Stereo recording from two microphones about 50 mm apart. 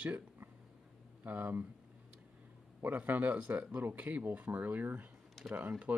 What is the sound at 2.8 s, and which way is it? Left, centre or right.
Speech, right.